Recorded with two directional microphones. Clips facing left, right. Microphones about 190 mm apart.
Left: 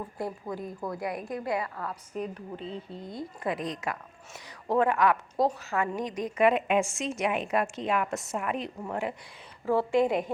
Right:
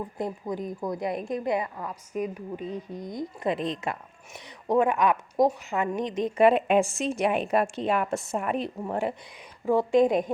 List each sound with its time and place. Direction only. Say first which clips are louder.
0.2 s a woman's voice: right 3 dB; 20° right (ahead or behind)
9.6 s a woman's voice: right 3 dB; 15° right (ahead or behind)